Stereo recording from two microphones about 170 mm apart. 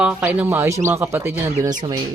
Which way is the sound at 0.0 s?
10° right (ahead or behind).